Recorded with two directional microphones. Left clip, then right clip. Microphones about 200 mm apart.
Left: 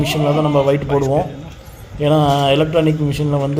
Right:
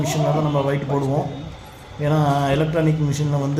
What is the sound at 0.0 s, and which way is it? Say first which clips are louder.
Speech: left 5 dB; 20° left (ahead or behind).